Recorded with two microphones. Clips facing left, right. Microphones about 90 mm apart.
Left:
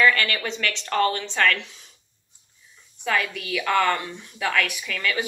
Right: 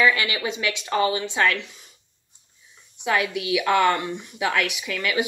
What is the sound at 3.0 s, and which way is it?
A woman's voice, 15° right (ahead or behind).